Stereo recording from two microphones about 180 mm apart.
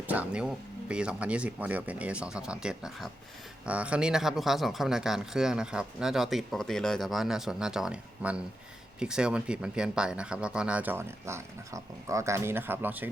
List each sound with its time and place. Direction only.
0.1 s speech: 5° right (ahead or behind)